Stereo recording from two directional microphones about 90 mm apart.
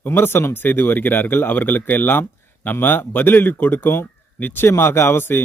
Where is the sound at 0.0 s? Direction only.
25° left (ahead or behind).